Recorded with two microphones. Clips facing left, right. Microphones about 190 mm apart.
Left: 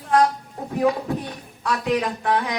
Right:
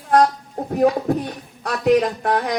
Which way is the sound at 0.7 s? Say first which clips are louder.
Right 4 dB; 45° right (ahead or behind).